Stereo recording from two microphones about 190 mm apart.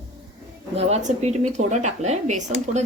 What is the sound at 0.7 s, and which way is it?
Speech, 35° right (ahead or behind).